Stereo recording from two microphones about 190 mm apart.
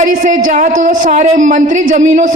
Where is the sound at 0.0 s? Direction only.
40° right (ahead or behind).